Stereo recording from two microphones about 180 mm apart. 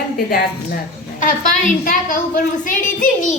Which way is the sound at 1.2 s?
45° left (ahead or behind).